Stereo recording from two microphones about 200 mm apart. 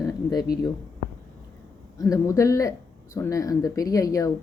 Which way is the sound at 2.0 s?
15° left (ahead or behind).